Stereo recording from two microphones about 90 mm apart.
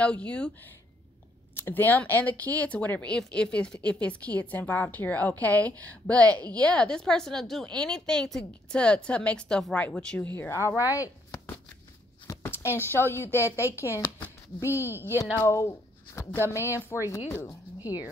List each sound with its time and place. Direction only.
0.0 s speech: 15° left (ahead or behind)
1.6 s speech: 20° left (ahead or behind)
10.8 s speech: 20° right (ahead or behind)
12.4 s a woman's voice: 25° left (ahead or behind)